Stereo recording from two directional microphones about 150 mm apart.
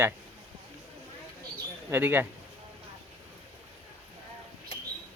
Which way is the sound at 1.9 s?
15° right (ahead or behind).